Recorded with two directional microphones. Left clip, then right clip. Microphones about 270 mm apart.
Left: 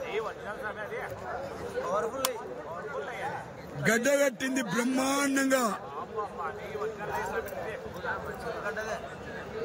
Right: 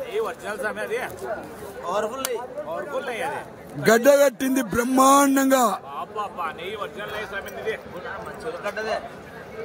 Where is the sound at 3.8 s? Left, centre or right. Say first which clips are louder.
Right 10 dB; centre.